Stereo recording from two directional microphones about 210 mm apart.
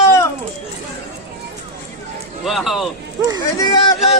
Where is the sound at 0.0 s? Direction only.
15° left (ahead or behind).